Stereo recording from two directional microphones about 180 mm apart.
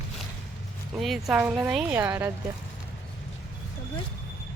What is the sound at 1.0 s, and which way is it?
Speech, centre (ahead or behind).